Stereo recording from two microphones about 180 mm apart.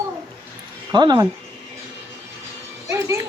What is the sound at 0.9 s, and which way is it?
Speech, 20° right (ahead or behind).